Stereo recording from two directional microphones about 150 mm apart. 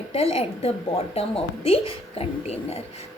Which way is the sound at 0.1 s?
40° left (ahead or behind).